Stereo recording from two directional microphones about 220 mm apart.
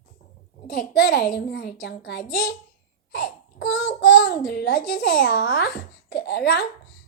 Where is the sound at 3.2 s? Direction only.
45° left (ahead or behind).